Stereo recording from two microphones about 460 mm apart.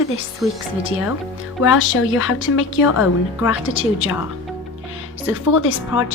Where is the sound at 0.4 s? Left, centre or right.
Centre.